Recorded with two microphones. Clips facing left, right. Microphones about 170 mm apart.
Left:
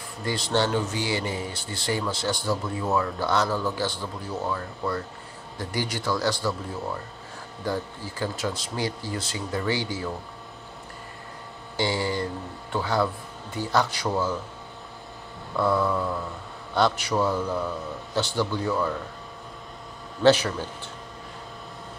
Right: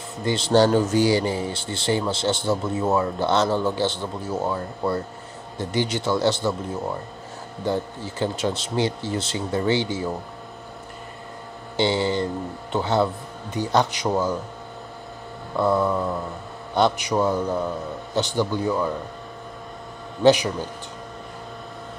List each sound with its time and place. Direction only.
0.2 s speech: 25° right (ahead or behind)
0.5 s speech: 40° right (ahead or behind); by 10.1 s 25° right (ahead or behind)
11.7 s speech: 25° right (ahead or behind)
15.5 s speech: 20° right (ahead or behind)
20.2 s speech: 15° right (ahead or behind)